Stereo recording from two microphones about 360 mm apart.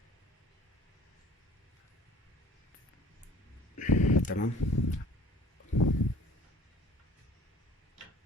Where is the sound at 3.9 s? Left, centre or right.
Left.